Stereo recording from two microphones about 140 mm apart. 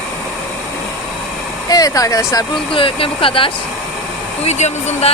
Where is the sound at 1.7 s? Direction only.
25° left (ahead or behind).